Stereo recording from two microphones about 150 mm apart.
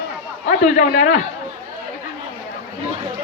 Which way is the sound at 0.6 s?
55° left (ahead or behind).